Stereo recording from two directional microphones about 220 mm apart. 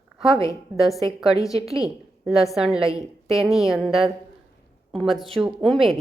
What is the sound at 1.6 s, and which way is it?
Speech, 15° left (ahead or behind).